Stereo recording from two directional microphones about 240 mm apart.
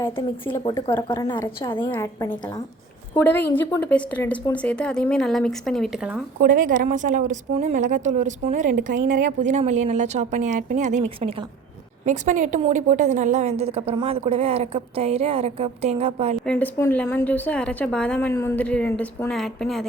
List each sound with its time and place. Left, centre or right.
0.0 s a woman's voice: centre
6.4 s a woman's voice: right
16.5 s a woman's voice: centre